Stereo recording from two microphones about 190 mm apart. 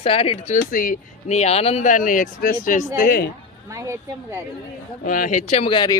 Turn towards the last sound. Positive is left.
turn(degrees=25)  # may be behind; listen again after turning